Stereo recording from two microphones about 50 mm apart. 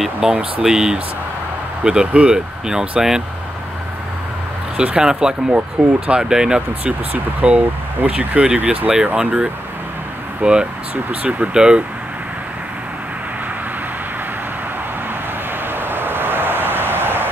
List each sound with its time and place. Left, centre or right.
0.3 s speech: centre
4.7 s speech: centre
5.5 s speech: right
11.5 s speech: centre
15.7 s vehicle: right